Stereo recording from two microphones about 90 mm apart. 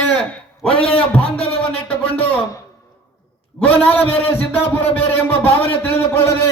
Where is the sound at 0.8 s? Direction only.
15° left (ahead or behind).